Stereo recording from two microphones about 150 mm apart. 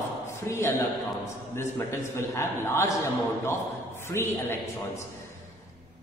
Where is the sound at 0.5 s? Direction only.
15° left (ahead or behind).